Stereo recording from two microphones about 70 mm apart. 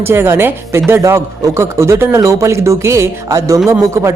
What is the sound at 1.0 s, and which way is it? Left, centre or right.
Speech, right.